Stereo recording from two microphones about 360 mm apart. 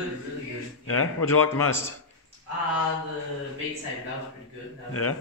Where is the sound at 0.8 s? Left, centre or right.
Left.